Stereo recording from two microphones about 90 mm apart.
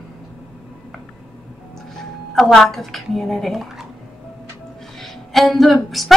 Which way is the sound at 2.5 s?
Centre (ahead or behind).